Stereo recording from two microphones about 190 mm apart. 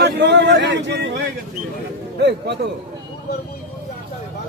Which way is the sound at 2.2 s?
60° right (ahead or behind).